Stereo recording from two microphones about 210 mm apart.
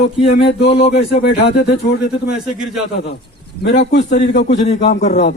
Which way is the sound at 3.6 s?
55° left (ahead or behind).